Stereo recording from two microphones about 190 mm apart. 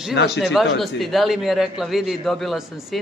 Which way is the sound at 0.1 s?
60° left (ahead or behind).